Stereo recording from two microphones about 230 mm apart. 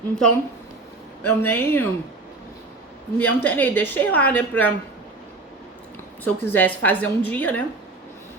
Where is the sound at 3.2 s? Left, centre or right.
Centre.